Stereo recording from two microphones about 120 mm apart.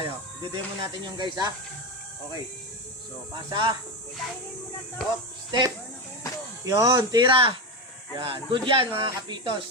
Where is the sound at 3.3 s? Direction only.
40° right (ahead or behind).